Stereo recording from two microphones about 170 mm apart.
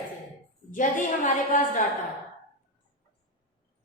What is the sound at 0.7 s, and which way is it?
A woman's voice, 50° left (ahead or behind).